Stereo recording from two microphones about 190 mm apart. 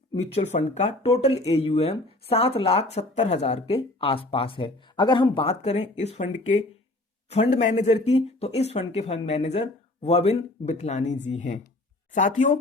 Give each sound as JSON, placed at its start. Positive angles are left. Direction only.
{"t": 0.1, "sound": "speech", "side_deg": 35}